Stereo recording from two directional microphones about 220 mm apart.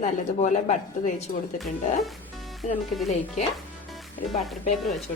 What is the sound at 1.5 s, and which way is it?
Speech, centre (ahead or behind).